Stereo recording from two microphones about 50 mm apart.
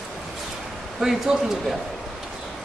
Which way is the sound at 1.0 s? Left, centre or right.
Centre.